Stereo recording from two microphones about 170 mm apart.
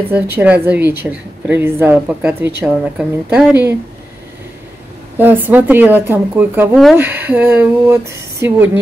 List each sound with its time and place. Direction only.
0.1 s a woman's voice: 10° right (ahead or behind)
5.1 s a woman's voice: 10° right (ahead or behind)